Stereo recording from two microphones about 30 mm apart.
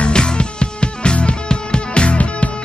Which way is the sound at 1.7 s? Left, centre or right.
Left.